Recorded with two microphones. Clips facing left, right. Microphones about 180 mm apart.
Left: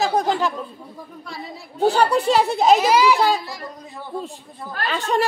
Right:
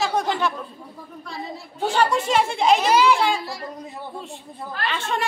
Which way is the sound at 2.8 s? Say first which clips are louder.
Left 1 dB; 5° left (ahead or behind).